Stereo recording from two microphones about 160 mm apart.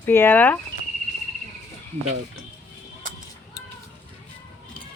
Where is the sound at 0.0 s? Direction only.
15° left (ahead or behind).